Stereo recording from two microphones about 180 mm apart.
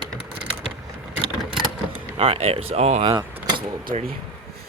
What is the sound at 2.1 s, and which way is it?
Speech, 30° right (ahead or behind).